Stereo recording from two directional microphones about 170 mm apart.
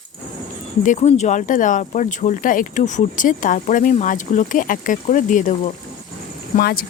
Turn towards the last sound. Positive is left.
turn(degrees=65)  # may be behind; listen again after turning